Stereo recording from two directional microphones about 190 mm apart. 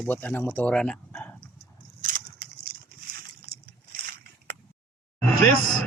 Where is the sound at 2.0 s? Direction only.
50° right (ahead or behind).